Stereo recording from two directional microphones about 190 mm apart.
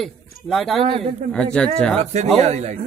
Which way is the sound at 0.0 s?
Centre (ahead or behind).